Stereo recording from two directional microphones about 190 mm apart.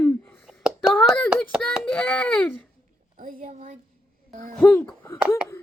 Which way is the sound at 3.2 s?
45° right (ahead or behind).